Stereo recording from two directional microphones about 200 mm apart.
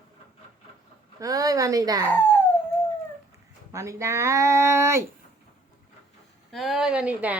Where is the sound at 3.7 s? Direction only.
15° right (ahead or behind).